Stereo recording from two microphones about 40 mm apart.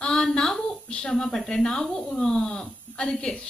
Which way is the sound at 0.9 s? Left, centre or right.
Centre.